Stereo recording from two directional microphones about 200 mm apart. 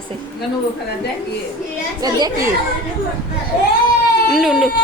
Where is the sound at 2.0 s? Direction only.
20° right (ahead or behind).